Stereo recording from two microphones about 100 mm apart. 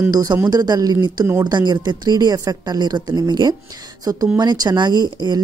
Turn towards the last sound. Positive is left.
turn(degrees=-45)  # may be behind; listen again after turning